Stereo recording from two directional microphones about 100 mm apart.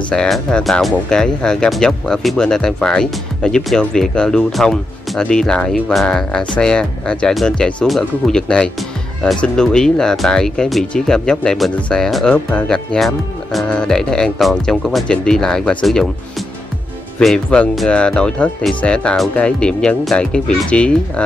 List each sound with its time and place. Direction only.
0.1 s speech: 5° left (ahead or behind)
17.2 s speech: 5° left (ahead or behind)